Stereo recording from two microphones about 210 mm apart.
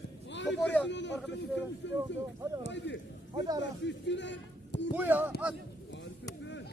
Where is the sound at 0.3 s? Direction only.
60° left (ahead or behind).